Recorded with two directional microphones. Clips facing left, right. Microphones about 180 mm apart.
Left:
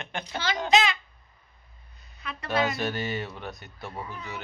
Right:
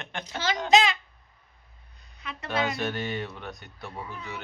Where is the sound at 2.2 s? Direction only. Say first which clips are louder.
Left 1 dB; 20° right (ahead or behind).